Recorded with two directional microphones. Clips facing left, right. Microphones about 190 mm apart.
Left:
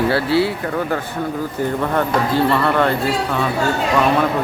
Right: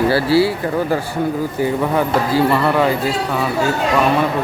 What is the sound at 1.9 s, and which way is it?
Speech, 5° right (ahead or behind).